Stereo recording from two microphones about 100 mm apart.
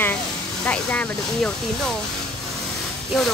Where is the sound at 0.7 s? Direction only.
15° left (ahead or behind).